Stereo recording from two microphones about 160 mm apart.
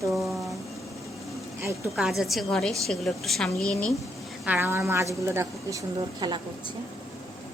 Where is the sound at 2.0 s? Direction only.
Centre (ahead or behind).